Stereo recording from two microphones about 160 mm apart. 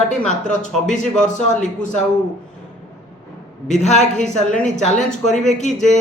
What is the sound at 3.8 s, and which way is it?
Speech, 45° left (ahead or behind).